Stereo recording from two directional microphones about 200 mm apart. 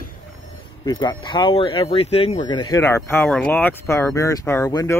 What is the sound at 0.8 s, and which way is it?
Speech, 20° left (ahead or behind).